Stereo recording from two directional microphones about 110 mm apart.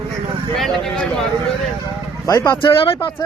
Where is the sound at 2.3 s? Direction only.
35° left (ahead or behind).